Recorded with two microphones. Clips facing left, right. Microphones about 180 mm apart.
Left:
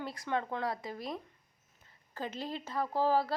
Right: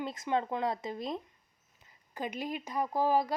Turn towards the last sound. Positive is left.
turn(degrees=-15)  # may be behind; listen again after turning